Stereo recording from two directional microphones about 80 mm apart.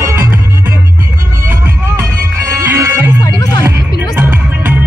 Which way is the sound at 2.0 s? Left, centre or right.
Right.